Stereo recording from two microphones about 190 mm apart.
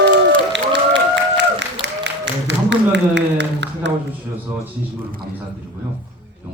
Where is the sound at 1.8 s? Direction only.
65° right (ahead or behind).